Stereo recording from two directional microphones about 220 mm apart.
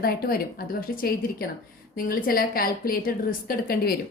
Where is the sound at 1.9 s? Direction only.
40° left (ahead or behind).